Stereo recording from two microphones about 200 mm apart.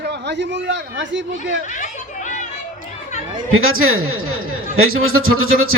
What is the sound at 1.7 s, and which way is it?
Chatter, 40° left (ahead or behind).